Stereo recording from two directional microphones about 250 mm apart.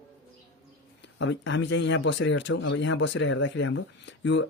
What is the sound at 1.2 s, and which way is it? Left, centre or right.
Speech, left.